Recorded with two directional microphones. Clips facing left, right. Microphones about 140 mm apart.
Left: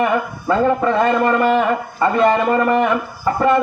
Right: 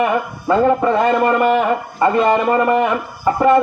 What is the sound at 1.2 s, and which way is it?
A man's voice, 15° right (ahead or behind).